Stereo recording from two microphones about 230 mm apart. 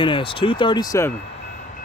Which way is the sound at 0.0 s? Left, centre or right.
Left.